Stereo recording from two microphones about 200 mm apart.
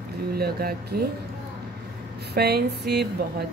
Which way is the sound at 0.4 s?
50° right (ahead or behind).